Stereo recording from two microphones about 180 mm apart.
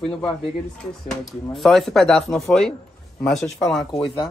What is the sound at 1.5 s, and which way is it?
Speech, centre (ahead or behind).